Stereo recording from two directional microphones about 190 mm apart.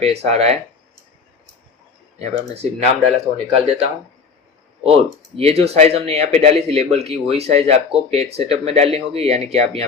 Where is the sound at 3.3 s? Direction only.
35° right (ahead or behind).